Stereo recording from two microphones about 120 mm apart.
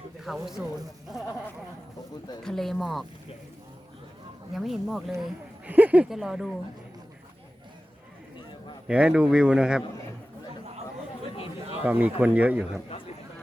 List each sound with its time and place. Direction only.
0.3 s speech: centre (ahead or behind)
2.4 s speech: 5° left (ahead or behind)
4.5 s speech: centre (ahead or behind)
5.7 s speech: 15° right (ahead or behind)
6.1 s speech: 5° right (ahead or behind)
8.9 s speech: 10° right (ahead or behind)
11.8 s speech: 15° right (ahead or behind)